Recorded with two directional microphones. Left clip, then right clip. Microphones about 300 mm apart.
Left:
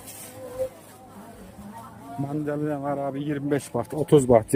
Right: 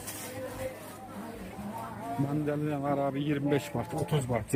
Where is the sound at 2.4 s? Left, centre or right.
Centre.